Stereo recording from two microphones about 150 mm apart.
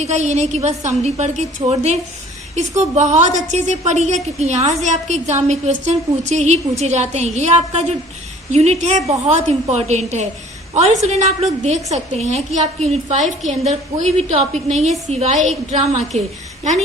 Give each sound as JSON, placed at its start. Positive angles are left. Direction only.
{"t": 0.0, "sound": "a woman's voice", "side_deg": -50}